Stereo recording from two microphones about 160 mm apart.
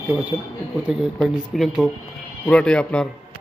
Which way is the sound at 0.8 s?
5° right (ahead or behind).